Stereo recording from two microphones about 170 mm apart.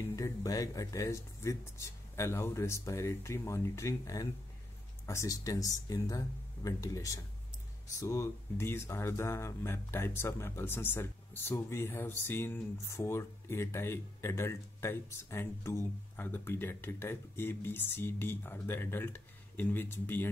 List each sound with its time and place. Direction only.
0.1 s speech: 20° left (ahead or behind)